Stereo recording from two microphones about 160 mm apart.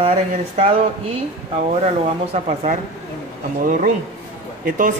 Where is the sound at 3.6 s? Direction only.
55° right (ahead or behind).